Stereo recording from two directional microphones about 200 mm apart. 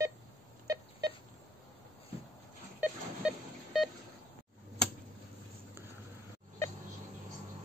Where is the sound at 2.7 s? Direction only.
5° right (ahead or behind).